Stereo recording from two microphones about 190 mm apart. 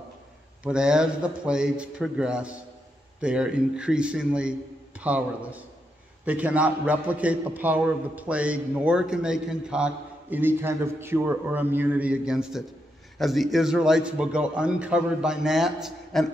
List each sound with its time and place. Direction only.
0.7 s a man's voice: 5° right (ahead or behind)